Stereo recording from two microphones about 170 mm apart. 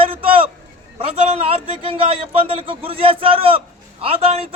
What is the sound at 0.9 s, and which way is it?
A man's voice, 35° right (ahead or behind).